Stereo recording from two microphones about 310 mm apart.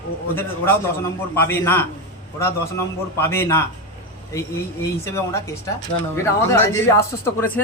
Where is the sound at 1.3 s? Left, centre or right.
Centre.